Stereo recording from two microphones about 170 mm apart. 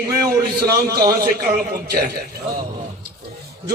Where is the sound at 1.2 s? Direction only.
60° right (ahead or behind).